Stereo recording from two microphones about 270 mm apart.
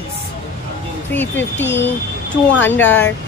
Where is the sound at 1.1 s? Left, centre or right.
Centre.